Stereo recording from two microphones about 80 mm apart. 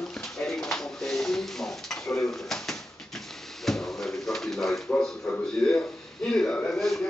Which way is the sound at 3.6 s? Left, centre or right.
Centre.